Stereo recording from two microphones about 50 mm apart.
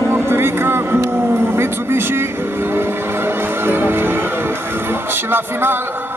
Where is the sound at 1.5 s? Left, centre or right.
Right.